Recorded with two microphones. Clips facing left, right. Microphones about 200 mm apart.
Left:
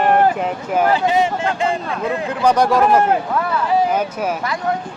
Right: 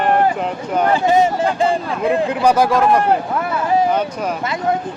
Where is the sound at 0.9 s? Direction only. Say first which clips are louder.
Right 2 dB; 45° right (ahead or behind).